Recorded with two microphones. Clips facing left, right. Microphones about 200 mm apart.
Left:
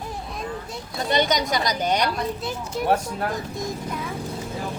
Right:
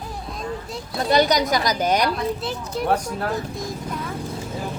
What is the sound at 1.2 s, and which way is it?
A woman's voice, centre (ahead or behind).